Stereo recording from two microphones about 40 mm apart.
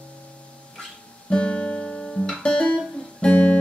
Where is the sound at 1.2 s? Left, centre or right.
Left.